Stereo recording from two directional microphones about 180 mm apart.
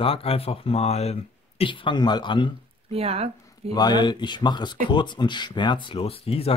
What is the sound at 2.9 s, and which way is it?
Speech, 35° right (ahead or behind).